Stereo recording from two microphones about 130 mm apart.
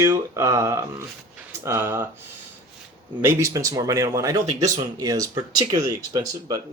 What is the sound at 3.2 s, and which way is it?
Speech, 20° right (ahead or behind).